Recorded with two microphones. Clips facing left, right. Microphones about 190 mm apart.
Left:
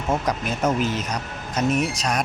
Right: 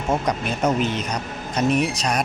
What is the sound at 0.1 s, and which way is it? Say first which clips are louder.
A man's voice: right 1 dB; centre (ahead or behind).